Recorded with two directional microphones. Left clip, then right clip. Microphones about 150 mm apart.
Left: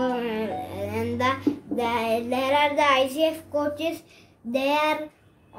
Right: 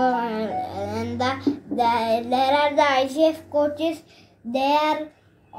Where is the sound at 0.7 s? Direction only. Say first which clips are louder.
Right 1 dB; 55° left (ahead or behind).